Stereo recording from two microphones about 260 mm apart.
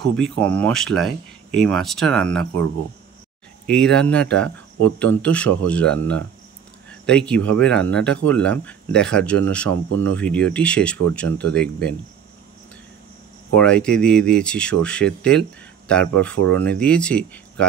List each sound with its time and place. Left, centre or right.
0.0 s speech: centre
3.6 s speech: centre
13.6 s speech: centre